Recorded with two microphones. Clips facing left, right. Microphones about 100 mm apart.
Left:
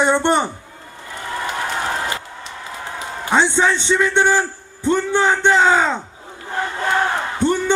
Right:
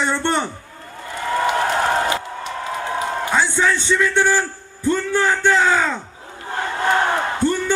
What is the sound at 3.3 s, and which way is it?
A man's voice, 20° left (ahead or behind).